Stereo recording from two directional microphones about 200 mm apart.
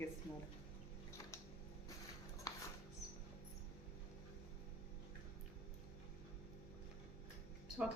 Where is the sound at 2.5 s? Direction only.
20° left (ahead or behind).